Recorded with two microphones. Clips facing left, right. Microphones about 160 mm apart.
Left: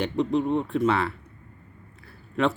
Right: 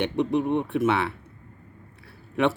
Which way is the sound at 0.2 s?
20° right (ahead or behind).